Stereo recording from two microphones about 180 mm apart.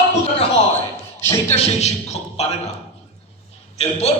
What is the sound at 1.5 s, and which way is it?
A man's voice, 35° left (ahead or behind).